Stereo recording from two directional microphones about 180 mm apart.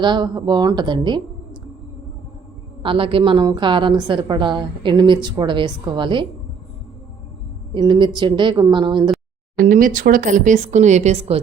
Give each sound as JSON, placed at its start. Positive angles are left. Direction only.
{"t": 0.0, "sound": "a woman's voice", "side_deg": -25}
{"t": 2.8, "sound": "a woman's voice", "side_deg": -30}
{"t": 7.7, "sound": "a woman's voice", "side_deg": -25}
{"t": 9.6, "sound": "speech", "side_deg": -50}